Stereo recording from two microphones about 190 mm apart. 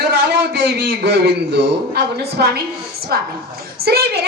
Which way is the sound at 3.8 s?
55° right (ahead or behind).